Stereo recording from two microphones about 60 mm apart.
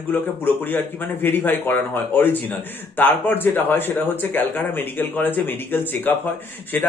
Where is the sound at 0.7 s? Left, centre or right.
Left.